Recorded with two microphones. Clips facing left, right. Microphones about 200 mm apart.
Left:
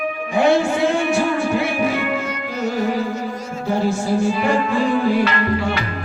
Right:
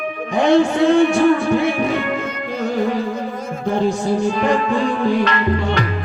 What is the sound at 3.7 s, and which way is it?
Music, 5° left (ahead or behind).